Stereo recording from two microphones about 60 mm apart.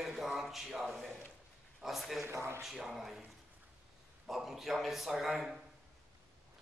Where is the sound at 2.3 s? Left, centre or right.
Right.